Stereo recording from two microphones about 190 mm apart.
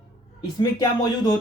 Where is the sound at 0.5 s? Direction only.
20° left (ahead or behind).